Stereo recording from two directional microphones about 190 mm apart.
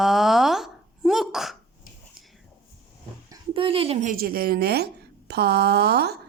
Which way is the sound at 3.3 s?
30° right (ahead or behind).